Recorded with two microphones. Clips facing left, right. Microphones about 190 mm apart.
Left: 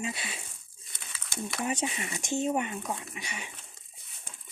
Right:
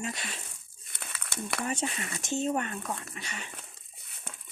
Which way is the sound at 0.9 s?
60° right (ahead or behind).